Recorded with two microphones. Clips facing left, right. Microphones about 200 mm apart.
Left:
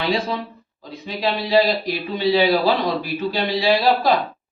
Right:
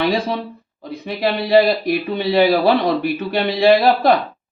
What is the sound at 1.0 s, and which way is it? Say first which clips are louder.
Speech: right 3 dB; 60° right (ahead or behind).